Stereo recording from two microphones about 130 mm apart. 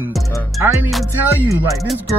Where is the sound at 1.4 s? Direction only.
20° right (ahead or behind).